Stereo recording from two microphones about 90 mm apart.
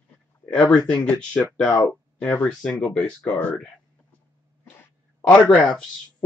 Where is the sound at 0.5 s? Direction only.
10° left (ahead or behind).